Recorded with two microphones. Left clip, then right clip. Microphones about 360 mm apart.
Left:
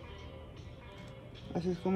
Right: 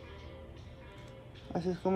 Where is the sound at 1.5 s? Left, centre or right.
Centre.